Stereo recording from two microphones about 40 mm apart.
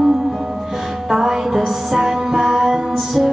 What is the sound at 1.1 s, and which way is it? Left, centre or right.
Music, centre.